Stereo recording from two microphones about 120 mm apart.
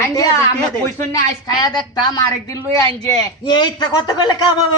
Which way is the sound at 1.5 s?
35° left (ahead or behind).